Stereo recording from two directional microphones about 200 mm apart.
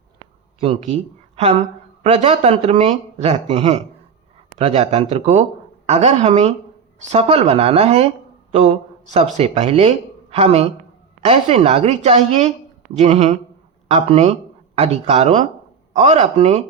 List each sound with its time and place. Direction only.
0.6 s speech: 35° right (ahead or behind)
2.0 s speech: 30° right (ahead or behind)
9.4 s speech: 30° right (ahead or behind)